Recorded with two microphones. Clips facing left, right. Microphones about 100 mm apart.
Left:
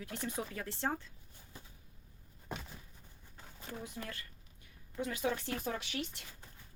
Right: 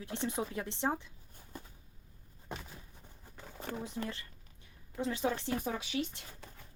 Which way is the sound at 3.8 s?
25° right (ahead or behind).